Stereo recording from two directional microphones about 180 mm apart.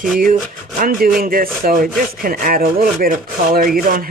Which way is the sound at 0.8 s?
50° right (ahead or behind).